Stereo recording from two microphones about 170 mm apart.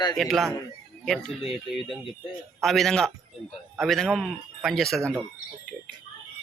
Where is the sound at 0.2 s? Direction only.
Centre (ahead or behind).